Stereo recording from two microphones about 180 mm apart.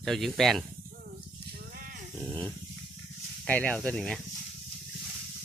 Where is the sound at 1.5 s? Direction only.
55° right (ahead or behind).